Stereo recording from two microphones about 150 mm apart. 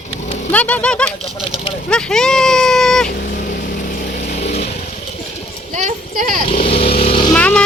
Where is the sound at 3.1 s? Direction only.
65° left (ahead or behind); by 4.6 s 50° left (ahead or behind).